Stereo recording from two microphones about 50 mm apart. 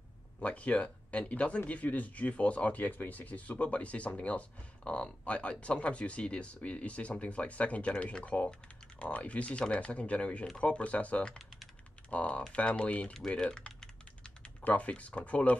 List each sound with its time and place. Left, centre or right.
0.4 s speech: left
11.3 s typing: centre
12.1 s speech: left
13.3 s typing: centre
14.6 s speech: left